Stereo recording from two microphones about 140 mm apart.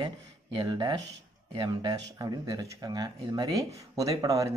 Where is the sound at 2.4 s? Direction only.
25° right (ahead or behind).